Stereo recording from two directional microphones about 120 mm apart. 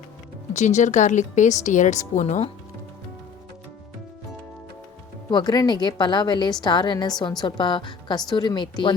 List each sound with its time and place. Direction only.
0.5 s a woman's voice: 80° left
5.3 s a woman's voice: 35° left (ahead or behind)